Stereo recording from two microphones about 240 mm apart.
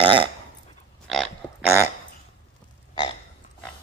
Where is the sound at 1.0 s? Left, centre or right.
Centre.